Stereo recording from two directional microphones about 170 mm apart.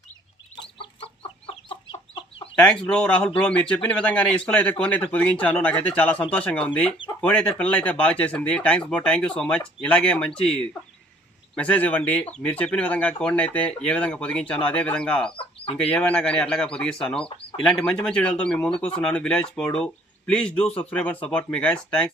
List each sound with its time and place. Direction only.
0.8 s chicken: 35° left (ahead or behind)
2.6 s speech: 5° left (ahead or behind)
11.5 s speech: 5° left (ahead or behind)